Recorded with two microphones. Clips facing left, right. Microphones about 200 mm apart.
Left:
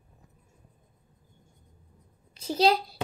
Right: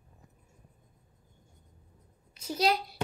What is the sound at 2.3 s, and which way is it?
Speech, 30° left (ahead or behind).